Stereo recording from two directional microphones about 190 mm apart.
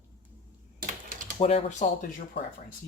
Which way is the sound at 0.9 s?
45° right (ahead or behind).